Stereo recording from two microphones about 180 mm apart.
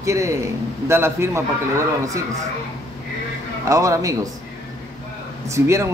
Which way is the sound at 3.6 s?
15° right (ahead or behind).